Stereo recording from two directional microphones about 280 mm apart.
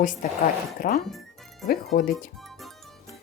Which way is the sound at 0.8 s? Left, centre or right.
Left.